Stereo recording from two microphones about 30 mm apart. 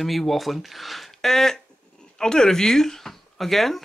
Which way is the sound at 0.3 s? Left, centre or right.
Centre.